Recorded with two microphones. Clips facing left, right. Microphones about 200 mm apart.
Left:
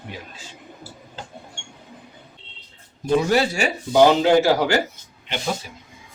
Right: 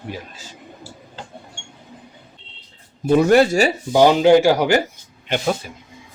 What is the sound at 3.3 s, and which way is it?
Speech, 55° right (ahead or behind).